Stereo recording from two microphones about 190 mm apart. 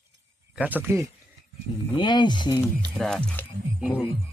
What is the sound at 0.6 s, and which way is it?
Speech, 10° right (ahead or behind).